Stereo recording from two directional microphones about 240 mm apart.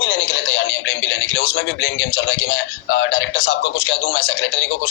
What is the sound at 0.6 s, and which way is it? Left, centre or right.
A man's voice, left.